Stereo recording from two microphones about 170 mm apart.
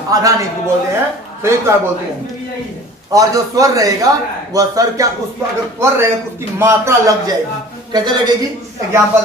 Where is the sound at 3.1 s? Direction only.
20° right (ahead or behind).